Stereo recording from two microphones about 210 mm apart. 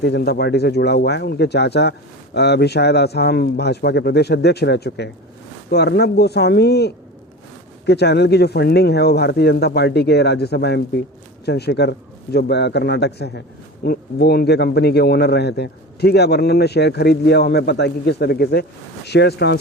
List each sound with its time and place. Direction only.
0.0 s speech: 50° left (ahead or behind)